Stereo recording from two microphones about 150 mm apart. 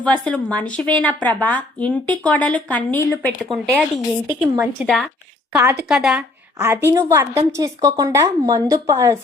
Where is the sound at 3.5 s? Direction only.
Centre (ahead or behind).